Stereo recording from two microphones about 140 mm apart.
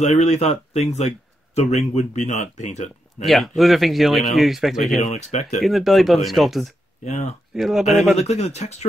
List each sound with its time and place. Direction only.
0.0 s speech: 50° left (ahead or behind)
3.3 s speech: centre (ahead or behind)
5.1 s speech: 55° left (ahead or behind)
5.6 s speech: centre (ahead or behind)
7.1 s speech: 50° left (ahead or behind)
7.5 s speech: centre (ahead or behind)
8.2 s speech: 50° left (ahead or behind)